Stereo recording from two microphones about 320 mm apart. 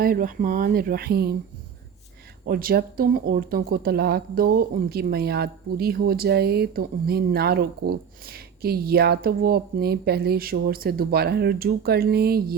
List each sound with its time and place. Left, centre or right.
0.0 s speech: right
2.5 s speech: right